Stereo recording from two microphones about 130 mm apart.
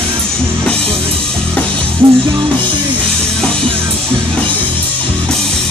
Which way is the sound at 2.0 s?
40° right (ahead or behind).